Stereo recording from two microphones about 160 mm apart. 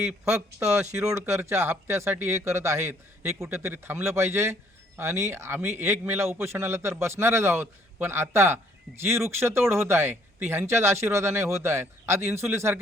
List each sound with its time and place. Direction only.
0.0 s a man's voice: 5° right (ahead or behind)